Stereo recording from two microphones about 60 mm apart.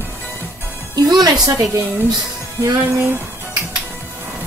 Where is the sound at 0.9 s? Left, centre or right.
Right.